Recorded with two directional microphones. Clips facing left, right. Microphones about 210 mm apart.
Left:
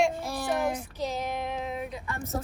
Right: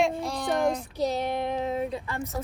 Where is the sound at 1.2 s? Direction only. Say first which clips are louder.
Right 4 dB; 30° right (ahead or behind).